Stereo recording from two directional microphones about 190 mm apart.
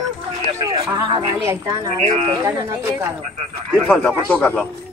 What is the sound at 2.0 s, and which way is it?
Speech, 35° right (ahead or behind).